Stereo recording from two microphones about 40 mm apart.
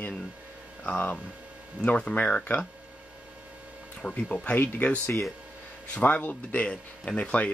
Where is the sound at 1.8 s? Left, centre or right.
Left.